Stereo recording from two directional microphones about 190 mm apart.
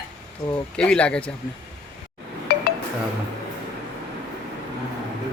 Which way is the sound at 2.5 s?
55° left (ahead or behind).